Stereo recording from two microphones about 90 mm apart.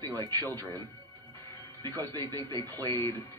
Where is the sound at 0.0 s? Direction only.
50° right (ahead or behind).